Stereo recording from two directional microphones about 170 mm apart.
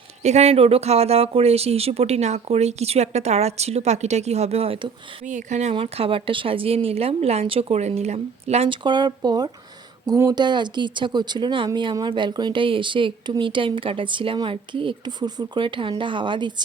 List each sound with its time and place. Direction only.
0.2 s speech: 40° right (ahead or behind)
5.7 s speech: 35° right (ahead or behind)